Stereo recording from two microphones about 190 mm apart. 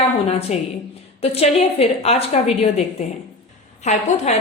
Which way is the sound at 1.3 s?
30° left (ahead or behind).